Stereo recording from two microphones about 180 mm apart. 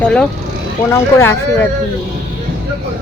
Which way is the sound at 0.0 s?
5° left (ahead or behind).